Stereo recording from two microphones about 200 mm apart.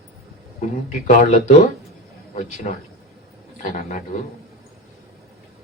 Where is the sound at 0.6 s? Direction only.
40° left (ahead or behind).